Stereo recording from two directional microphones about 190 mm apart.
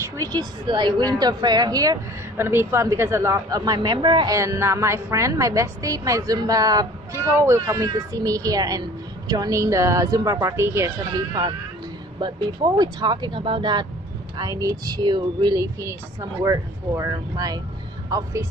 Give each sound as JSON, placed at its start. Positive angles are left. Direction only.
{"t": 0.2, "sound": "a woman's voice", "side_deg": -20}